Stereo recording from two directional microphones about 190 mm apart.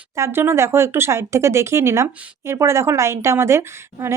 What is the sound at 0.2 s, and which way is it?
A woman's voice, 10° right (ahead or behind).